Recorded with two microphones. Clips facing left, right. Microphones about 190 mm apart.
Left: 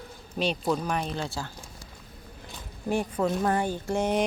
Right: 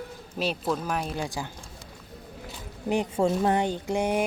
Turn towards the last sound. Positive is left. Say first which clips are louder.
# even
turn(degrees=-10)  # may be behind; listen again after turning